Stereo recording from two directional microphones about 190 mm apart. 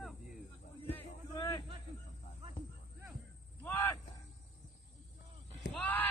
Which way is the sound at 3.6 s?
10° left (ahead or behind).